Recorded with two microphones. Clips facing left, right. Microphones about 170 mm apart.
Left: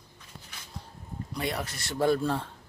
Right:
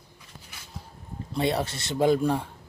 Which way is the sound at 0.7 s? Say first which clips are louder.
Right 1 dB; 5° right (ahead or behind).